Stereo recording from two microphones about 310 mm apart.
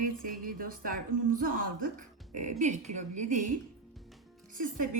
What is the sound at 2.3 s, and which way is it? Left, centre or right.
Speech, right.